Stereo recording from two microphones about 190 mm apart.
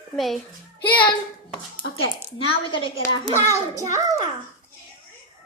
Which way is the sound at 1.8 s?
70° left (ahead or behind).